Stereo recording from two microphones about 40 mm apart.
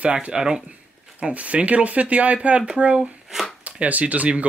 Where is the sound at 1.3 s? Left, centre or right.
Right.